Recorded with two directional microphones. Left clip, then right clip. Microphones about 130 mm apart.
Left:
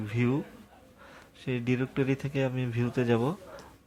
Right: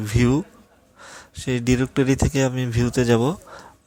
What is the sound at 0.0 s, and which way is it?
Speech, 45° right (ahead or behind).